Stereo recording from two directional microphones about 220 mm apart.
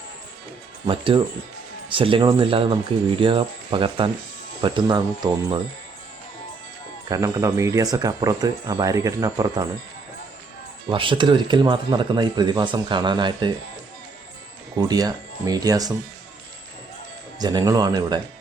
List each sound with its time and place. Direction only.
0.9 s speech: 25° right (ahead or behind)
7.1 s speech: 15° right (ahead or behind)
10.8 s speech: 20° right (ahead or behind)
14.8 s speech: 15° right (ahead or behind)
17.4 s speech: 20° right (ahead or behind)